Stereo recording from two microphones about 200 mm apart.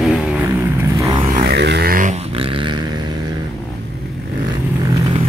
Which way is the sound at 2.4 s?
25° right (ahead or behind).